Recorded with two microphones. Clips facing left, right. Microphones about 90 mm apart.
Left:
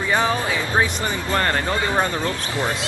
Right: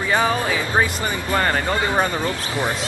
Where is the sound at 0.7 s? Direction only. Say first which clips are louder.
Right 1 dB; 5° right (ahead or behind).